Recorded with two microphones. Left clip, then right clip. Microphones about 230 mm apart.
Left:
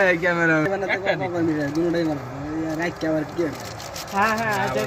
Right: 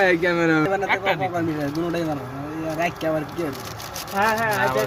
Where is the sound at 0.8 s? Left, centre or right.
Right.